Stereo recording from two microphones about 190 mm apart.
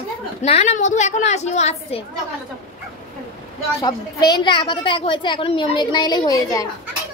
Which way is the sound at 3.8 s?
20° left (ahead or behind).